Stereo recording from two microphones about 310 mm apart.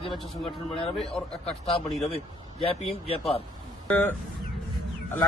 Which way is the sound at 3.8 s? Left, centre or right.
Centre.